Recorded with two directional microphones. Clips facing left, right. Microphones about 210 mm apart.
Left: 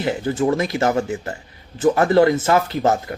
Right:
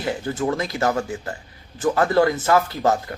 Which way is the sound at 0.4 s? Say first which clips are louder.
Left 3 dB; 25° left (ahead or behind).